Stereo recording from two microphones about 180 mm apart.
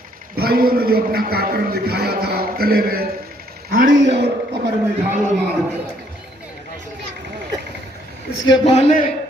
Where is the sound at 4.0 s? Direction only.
80° right.